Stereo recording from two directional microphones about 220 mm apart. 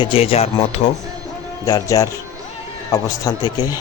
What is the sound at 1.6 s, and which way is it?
A man's voice, 15° left (ahead or behind).